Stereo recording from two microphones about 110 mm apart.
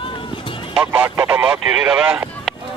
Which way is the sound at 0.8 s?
15° right (ahead or behind).